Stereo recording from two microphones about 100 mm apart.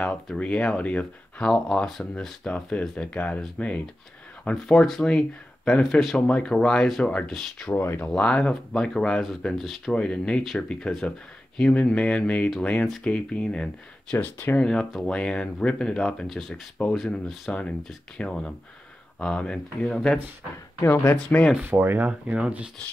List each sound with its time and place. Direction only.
0.4 s speech: 10° left (ahead or behind)
7.7 s speech: 25° left (ahead or behind)
8.1 s speech: 10° left (ahead or behind)
14.1 s speech: 20° left (ahead or behind)
14.7 s speech: 5° left (ahead or behind)
20.8 s speech: 20° left (ahead or behind)
21.5 s speech: 20° right (ahead or behind)